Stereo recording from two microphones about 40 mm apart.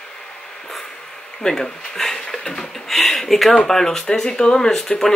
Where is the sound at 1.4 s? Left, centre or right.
Centre.